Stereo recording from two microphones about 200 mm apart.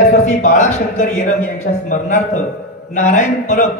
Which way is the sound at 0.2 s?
40° left (ahead or behind).